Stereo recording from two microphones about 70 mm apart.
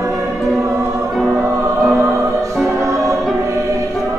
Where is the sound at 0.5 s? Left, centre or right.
Right.